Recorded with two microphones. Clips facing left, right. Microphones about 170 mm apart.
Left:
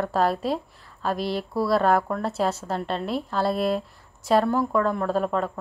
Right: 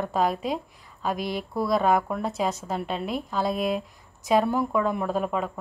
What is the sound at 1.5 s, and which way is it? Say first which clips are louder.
Speech: left 1 dB; 5° left (ahead or behind).